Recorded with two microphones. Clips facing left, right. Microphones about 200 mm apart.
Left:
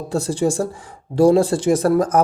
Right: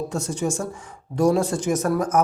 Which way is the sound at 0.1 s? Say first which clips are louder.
Left 6 dB; 35° left (ahead or behind).